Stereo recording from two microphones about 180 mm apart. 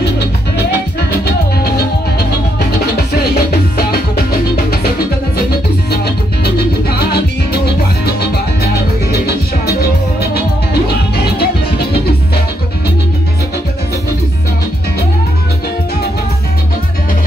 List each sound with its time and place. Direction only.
0.0 s music: 65° left (ahead or behind)
3.3 s music: 60° left (ahead or behind)
5.9 s music: 65° left (ahead or behind)